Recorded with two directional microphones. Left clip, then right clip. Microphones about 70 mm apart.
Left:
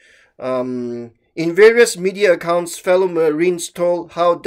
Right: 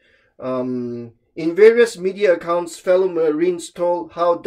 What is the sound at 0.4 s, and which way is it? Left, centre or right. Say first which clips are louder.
Speech: left 3 dB; left.